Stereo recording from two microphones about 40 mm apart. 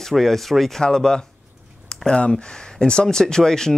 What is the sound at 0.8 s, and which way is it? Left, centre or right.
Speech, centre.